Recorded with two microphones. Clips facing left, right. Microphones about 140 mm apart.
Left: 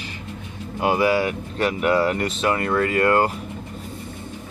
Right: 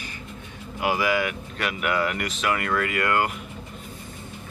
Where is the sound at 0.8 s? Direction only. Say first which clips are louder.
Left 4 dB; 30° left (ahead or behind).